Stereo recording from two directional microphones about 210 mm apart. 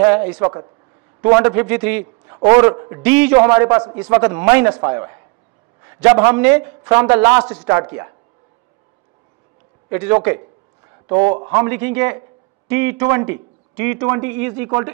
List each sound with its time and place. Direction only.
0.0 s a man's voice: 10° right (ahead or behind)
3.0 s a man's voice: 5° right (ahead or behind)
9.8 s a man's voice: 10° right (ahead or behind)
11.5 s a man's voice: 10° right (ahead or behind)